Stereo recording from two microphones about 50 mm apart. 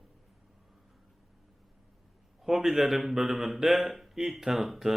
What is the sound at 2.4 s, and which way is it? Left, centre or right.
A man's voice, centre.